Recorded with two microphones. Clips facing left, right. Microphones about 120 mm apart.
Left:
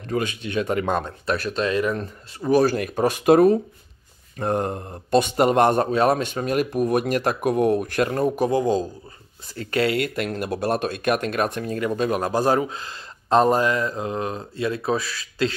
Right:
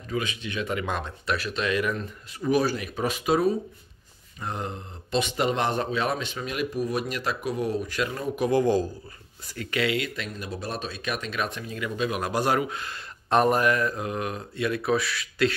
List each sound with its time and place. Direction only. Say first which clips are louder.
0.0 s speech: left 5 dB; 50° left (ahead or behind)
8.5 s a man's voice: left 1 dB; 20° left (ahead or behind)
9.6 s speech: left 5 dB; 40° left (ahead or behind)
10.3 s speech: left 9 dB; 70° left (ahead or behind); by 15.5 s 30° left (ahead or behind)